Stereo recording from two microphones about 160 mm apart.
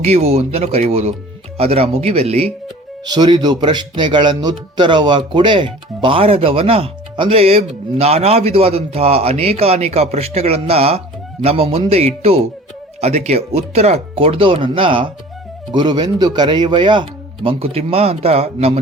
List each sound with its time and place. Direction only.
0.0 s speech: 40° right (ahead or behind)
3.0 s speech: 25° right (ahead or behind)